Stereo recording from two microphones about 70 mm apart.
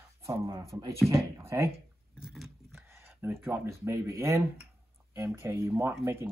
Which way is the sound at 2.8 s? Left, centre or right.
Right.